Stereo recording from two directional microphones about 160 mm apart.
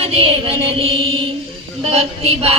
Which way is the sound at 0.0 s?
35° right (ahead or behind).